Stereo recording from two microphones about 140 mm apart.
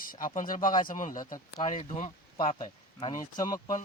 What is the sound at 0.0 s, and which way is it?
Speech, 75° left (ahead or behind).